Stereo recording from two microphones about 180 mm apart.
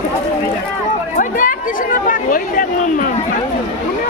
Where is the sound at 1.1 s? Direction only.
50° left (ahead or behind).